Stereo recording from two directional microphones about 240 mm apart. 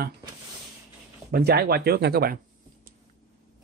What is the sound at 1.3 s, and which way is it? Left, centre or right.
Speech, right.